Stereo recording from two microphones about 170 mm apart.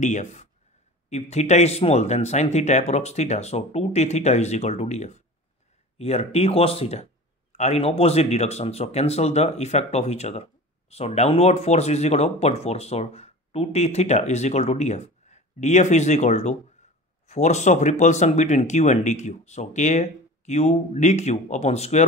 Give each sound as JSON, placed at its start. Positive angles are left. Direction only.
{"t": 0.0, "sound": "speech", "side_deg": 45}